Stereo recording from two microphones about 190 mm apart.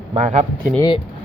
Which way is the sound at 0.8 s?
25° left (ahead or behind).